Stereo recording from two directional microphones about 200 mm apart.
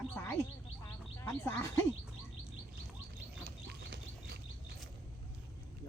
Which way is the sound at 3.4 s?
55° right (ahead or behind).